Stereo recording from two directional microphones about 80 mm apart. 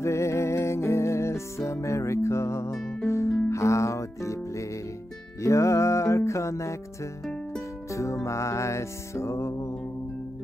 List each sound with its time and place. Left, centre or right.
0.0 s music: left
7.9 s music: left